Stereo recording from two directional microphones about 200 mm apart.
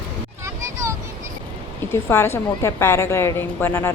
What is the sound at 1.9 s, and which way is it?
A woman's voice, 10° left (ahead or behind).